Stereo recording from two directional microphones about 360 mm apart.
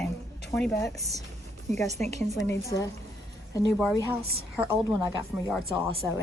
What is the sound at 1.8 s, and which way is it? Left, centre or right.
Speech, centre.